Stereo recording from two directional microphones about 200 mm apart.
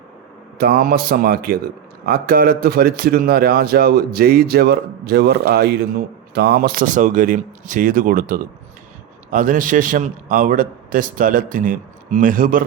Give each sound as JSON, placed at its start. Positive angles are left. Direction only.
{"t": 0.6, "sound": "a man's voice", "side_deg": -50}